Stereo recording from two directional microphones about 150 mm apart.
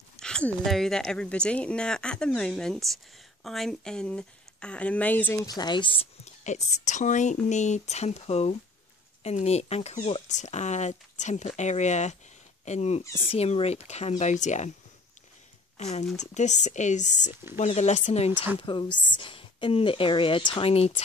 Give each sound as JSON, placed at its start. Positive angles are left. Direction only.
{"t": 0.2, "sound": "speech", "side_deg": 5}
{"t": 6.2, "sound": "speech", "side_deg": 50}
{"t": 15.8, "sound": "speech", "side_deg": 50}
{"t": 18.6, "sound": "a woman's voice", "side_deg": 35}